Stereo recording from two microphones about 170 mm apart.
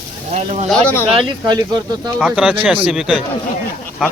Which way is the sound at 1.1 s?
30° right (ahead or behind).